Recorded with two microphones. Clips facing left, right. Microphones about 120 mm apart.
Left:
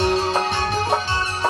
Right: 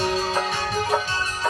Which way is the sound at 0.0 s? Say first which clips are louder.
Left 4 dB; 60° left (ahead or behind).